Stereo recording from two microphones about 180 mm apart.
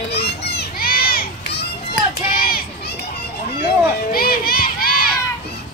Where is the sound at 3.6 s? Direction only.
55° left (ahead or behind).